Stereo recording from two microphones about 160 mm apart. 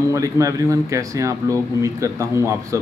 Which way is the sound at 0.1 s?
20° right (ahead or behind).